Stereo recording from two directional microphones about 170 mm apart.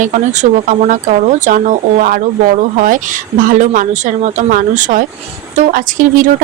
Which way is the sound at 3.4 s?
50° right (ahead or behind).